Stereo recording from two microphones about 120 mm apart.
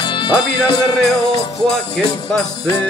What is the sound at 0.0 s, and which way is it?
Music, 40° left (ahead or behind).